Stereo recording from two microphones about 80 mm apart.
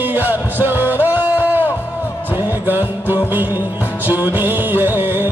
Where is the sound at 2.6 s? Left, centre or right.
Right.